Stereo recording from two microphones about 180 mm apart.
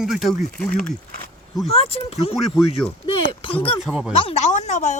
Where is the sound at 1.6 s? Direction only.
35° left (ahead or behind).